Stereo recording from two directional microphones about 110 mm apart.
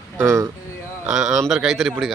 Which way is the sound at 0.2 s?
30° right (ahead or behind).